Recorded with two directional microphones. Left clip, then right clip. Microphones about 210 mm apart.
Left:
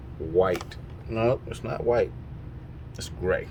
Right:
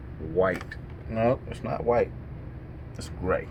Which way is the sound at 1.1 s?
90° left.